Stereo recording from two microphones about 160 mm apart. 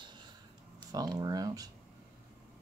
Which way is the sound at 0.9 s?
25° right (ahead or behind).